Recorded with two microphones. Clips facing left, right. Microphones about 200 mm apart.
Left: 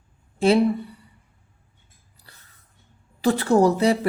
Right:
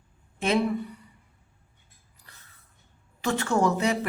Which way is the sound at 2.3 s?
35° left (ahead or behind).